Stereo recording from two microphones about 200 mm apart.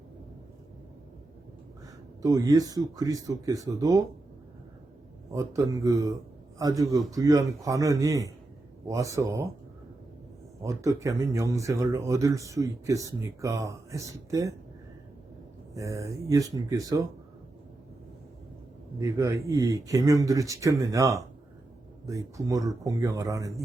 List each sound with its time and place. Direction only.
2.2 s speech: 15° right (ahead or behind)
5.3 s speech: 15° right (ahead or behind)
10.6 s speech: 15° right (ahead or behind)
15.7 s speech: 15° right (ahead or behind)
18.9 s speech: 15° right (ahead or behind)